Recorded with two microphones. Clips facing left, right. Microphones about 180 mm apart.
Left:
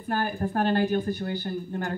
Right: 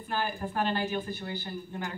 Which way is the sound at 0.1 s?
50° left (ahead or behind).